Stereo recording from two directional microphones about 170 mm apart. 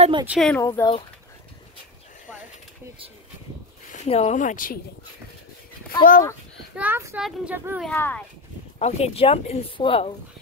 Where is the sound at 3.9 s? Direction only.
40° left (ahead or behind).